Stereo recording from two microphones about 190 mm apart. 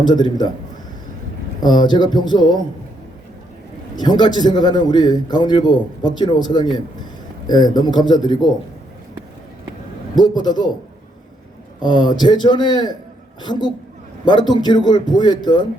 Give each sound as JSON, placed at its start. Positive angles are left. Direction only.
{"t": 0.0, "sound": "a man's voice", "side_deg": 20}
{"t": 1.6, "sound": "a man's voice", "side_deg": 20}
{"t": 3.9, "sound": "a man's voice", "side_deg": 20}
{"t": 10.2, "sound": "a man's voice", "side_deg": 20}
{"t": 11.8, "sound": "a man's voice", "side_deg": 25}